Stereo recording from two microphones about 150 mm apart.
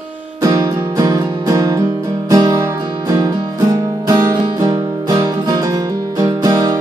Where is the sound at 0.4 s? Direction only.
25° right (ahead or behind).